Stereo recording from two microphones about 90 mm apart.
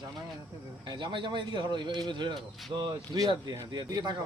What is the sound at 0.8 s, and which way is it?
A man's voice, 60° right (ahead or behind).